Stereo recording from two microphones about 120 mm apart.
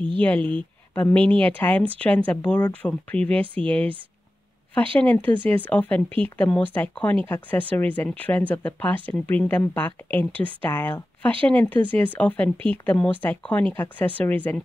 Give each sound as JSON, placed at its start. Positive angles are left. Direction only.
{"t": 0.5, "sound": "speech", "side_deg": 10}
{"t": 4.9, "sound": "speech", "side_deg": 15}